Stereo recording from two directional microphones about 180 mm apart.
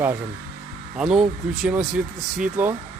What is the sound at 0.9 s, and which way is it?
Speech, 5° right (ahead or behind).